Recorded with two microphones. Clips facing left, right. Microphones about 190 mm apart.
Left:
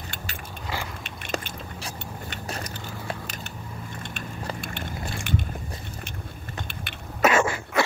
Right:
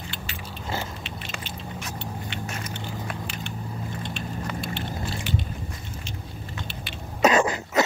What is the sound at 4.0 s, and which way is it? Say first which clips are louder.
Vehicle: right 4 dB; 50° left (ahead or behind).